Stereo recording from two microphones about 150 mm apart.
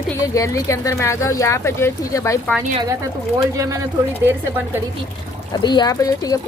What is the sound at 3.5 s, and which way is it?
A woman's voice, 20° right (ahead or behind).